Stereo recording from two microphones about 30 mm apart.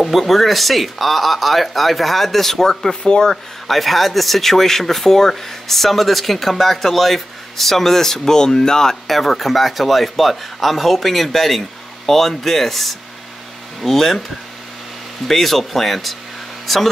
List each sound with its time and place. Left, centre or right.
0.0 s speech: centre
3.0 s speech: left
3.6 s speech: centre
9.0 s speech: centre
15.2 s speech: centre